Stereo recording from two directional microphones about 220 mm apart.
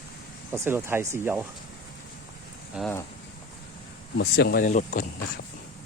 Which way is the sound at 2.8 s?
5° right (ahead or behind).